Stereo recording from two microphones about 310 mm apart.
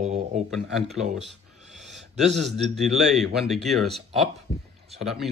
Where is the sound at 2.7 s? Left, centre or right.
Centre.